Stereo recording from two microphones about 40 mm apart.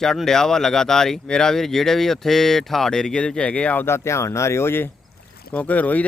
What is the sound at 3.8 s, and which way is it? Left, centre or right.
Speech, left.